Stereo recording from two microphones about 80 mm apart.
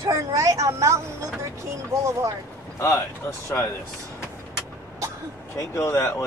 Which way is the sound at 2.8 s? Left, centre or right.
Left.